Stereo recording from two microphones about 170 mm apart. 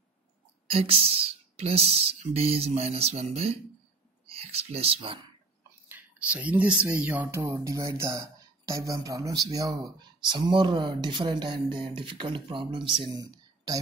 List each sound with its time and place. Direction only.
0.7 s speech: 35° right (ahead or behind)
5.9 s speech: 10° right (ahead or behind); by 13.0 s 30° right (ahead or behind)
13.1 s a sound: 20° right (ahead or behind)